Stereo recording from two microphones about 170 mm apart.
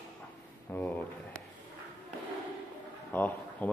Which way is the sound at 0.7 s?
10° left (ahead or behind).